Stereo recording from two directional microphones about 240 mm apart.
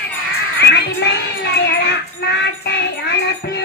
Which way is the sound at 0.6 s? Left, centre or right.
Left.